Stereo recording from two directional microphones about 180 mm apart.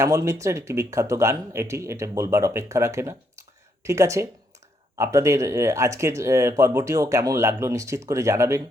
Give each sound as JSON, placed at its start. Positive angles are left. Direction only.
{"t": 0.0, "sound": "speech", "side_deg": -15}